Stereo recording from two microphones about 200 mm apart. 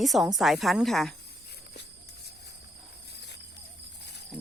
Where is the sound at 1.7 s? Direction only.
55° left (ahead or behind).